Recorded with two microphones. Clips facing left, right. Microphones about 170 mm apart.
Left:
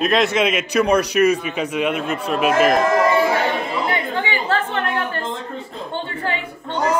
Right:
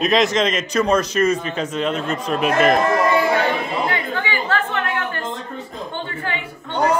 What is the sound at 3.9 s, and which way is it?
Chatter, 25° left (ahead or behind).